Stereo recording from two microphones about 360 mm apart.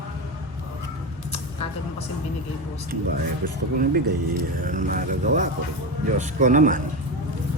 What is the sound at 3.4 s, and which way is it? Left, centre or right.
Speech, right.